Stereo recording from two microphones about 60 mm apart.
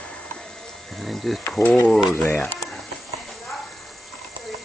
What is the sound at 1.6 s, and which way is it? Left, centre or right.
Speech, left.